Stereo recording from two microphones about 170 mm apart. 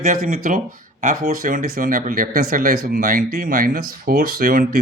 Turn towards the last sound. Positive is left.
turn(degrees=-60)  # may be behind; listen again after turning